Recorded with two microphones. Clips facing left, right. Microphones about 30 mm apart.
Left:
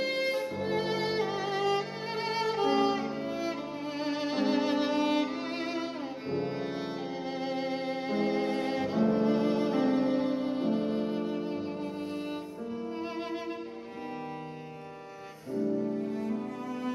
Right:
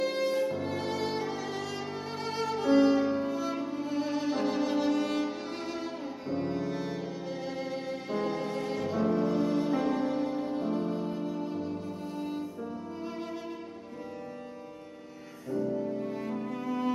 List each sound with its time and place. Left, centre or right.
0.0 s violin: centre
0.6 s music: left
15.5 s cello: centre
16.3 s music: centre